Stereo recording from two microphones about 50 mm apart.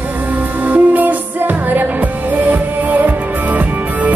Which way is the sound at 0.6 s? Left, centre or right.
Right.